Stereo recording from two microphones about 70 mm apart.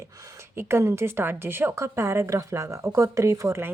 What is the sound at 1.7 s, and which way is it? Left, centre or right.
Speech, right.